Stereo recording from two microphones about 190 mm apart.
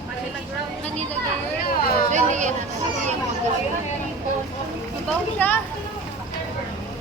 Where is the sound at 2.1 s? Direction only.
40° right (ahead or behind).